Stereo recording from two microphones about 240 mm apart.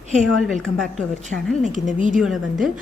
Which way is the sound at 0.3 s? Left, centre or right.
Centre.